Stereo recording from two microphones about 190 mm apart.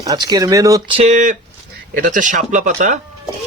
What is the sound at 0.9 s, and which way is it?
A man's voice, 40° right (ahead or behind).